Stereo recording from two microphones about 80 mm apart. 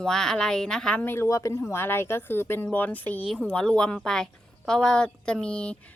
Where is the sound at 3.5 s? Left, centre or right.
Centre.